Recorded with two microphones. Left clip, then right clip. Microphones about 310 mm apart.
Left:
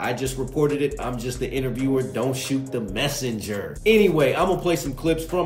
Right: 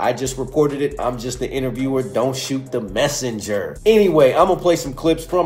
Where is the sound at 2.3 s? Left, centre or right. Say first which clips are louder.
Right 3 dB; centre.